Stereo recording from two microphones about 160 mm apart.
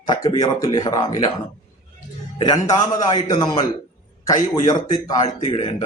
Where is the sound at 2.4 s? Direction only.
25° left (ahead or behind).